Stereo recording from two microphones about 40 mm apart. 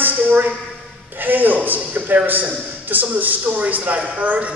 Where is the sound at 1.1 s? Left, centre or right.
Right.